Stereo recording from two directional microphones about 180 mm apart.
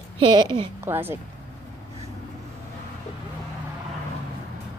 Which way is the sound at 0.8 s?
10° right (ahead or behind).